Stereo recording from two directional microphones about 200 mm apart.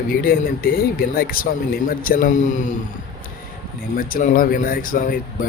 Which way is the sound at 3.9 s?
45° left (ahead or behind).